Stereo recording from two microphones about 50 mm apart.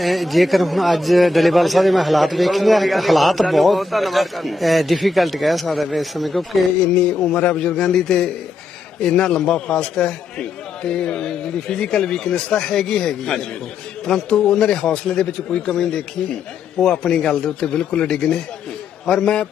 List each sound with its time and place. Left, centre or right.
0.0 s a man's voice: centre
6.9 s a man's voice: centre